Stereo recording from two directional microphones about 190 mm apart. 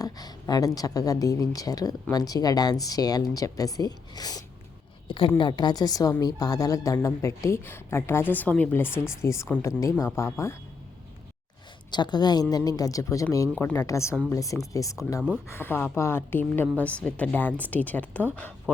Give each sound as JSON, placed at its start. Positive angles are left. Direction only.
{"t": 0.0, "sound": "a sound", "side_deg": 20}
{"t": 0.8, "sound": "a woman's voice", "side_deg": 20}
{"t": 11.9, "sound": "a woman's voice", "side_deg": 25}